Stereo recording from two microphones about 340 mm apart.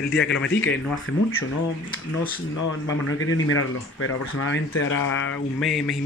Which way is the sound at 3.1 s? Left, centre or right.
Left.